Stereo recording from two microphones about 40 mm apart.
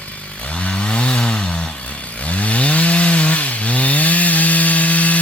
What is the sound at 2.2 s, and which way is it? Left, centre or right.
Chainsaw, left.